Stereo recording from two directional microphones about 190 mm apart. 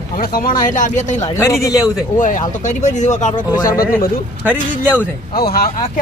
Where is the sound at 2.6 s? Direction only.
40° left (ahead or behind).